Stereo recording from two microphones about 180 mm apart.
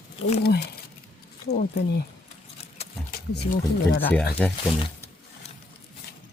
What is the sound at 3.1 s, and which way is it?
Speech, 55° left (ahead or behind).